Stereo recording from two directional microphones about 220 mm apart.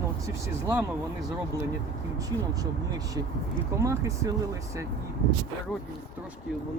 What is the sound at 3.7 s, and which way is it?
Speech, 15° right (ahead or behind).